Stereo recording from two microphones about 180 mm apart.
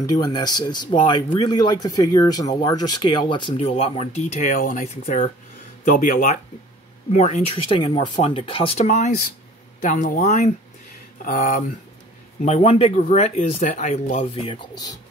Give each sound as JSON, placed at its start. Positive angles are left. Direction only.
{"t": 0.0, "sound": "speech", "side_deg": 20}
{"t": 4.8, "sound": "speech", "side_deg": 35}
{"t": 5.9, "sound": "a man's voice", "side_deg": 50}
{"t": 7.1, "sound": "a man's voice", "side_deg": 40}
{"t": 11.2, "sound": "a man's voice", "side_deg": 50}
{"t": 12.4, "sound": "speech", "side_deg": 35}